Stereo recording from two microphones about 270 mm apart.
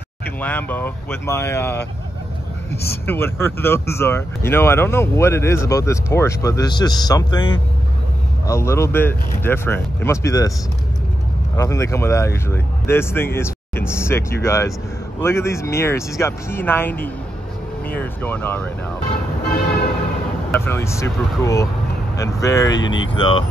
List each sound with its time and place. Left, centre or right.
0.4 s speech: centre
11.5 s speech: centre
18.2 s speech: centre
20.5 s speech: centre
22.8 s speech: left
23.1 s speech: centre